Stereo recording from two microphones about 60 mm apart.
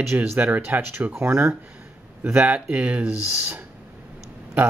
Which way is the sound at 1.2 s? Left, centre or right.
Right.